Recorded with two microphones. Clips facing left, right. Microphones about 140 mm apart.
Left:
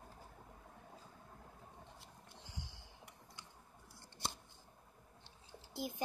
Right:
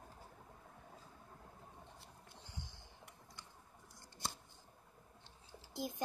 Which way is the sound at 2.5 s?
90° left.